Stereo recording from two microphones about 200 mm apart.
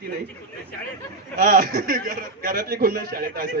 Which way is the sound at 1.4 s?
45° right (ahead or behind).